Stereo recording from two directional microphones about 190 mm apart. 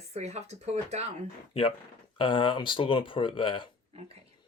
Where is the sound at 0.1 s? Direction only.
35° right (ahead or behind).